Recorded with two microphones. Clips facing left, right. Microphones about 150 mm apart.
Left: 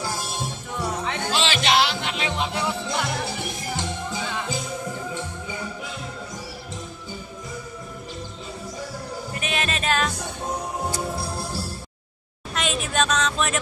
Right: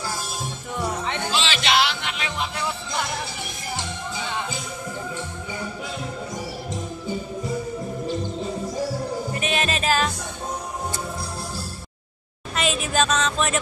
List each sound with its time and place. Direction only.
0.7 s music: centre (ahead or behind)
1.3 s music: 50° left (ahead or behind); by 2.6 s 25° left (ahead or behind)
9.3 s music: centre (ahead or behind)
12.5 s a sound: 5° right (ahead or behind)